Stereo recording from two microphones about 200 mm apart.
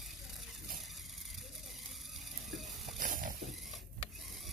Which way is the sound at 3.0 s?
45° right (ahead or behind).